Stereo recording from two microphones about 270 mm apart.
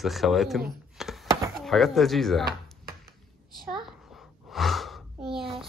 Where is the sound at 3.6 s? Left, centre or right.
Centre.